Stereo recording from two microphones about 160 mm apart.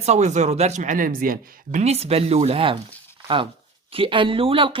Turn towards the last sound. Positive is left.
turn(degrees=-35)  # may be behind; listen again after turning